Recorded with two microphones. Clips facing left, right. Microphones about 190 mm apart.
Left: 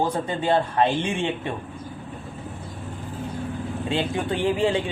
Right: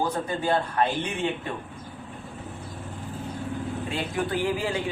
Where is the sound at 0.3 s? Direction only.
25° left (ahead or behind).